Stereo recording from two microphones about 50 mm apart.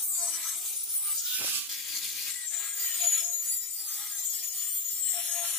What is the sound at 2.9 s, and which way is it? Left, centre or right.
Music, centre.